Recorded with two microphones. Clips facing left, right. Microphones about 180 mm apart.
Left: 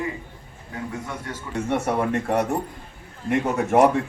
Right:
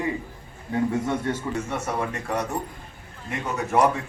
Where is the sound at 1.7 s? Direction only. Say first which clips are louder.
Left 5 dB; 60° left (ahead or behind).